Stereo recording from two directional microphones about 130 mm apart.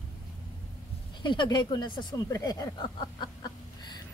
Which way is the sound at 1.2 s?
35° left (ahead or behind).